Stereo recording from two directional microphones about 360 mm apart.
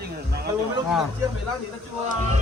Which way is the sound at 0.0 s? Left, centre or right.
Right.